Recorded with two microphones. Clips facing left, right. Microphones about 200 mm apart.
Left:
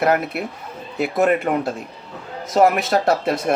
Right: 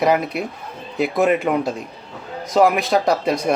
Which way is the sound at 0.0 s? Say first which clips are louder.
Right 1 dB; 5° left (ahead or behind).